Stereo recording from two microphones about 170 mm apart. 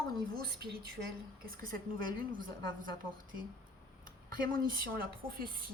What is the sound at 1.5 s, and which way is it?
Speech, 55° right (ahead or behind).